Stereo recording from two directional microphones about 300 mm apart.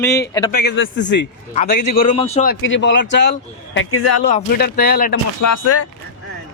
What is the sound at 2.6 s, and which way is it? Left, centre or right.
Speech, left.